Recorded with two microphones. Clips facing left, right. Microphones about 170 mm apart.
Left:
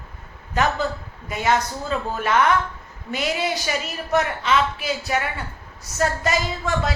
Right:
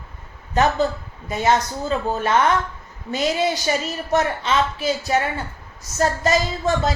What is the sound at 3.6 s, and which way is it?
A woman's voice, 30° right (ahead or behind).